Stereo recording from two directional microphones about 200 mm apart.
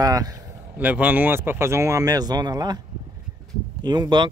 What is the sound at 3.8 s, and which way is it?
Speech, 20° right (ahead or behind).